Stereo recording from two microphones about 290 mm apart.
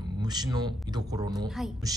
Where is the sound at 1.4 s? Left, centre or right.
Centre.